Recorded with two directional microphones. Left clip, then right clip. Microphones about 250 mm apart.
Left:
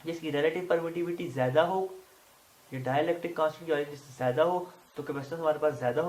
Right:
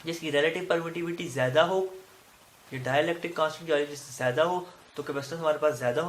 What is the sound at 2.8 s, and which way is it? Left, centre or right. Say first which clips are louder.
Speech: right 2 dB; right.